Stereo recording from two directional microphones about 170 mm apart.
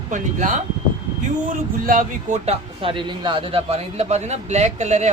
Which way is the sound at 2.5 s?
30° right (ahead or behind).